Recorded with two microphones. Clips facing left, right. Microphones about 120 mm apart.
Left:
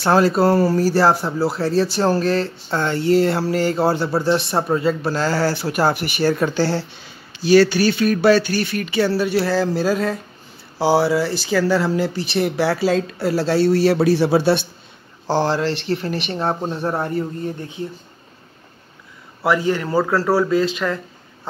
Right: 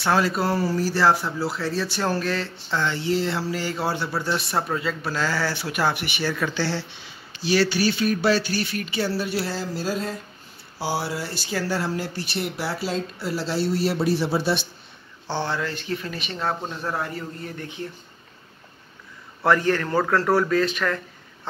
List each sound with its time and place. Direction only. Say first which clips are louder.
0.0 s speech: left 7 dB; 35° left (ahead or behind)
0.6 s speech: left 7 dB; 50° left (ahead or behind)
3.6 s speech: left 8 dB; 40° left (ahead or behind); by 10.1 s 75° left (ahead or behind)
10.8 s speech: left 11 dB; 90° left
12.4 s speech: left 10 dB; 90° left
16.3 s speech: left 3 dB; 30° left (ahead or behind)
19.4 s a man's voice: left 2 dB; 15° left (ahead or behind)
20.5 s speech: left 3 dB; 20° left (ahead or behind)